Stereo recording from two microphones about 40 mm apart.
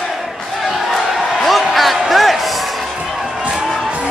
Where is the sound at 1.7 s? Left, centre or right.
Centre.